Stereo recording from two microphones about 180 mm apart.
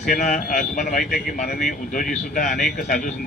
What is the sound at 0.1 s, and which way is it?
Speech, 45° left (ahead or behind).